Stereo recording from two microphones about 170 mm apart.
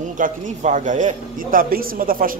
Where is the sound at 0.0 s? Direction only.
45° right (ahead or behind).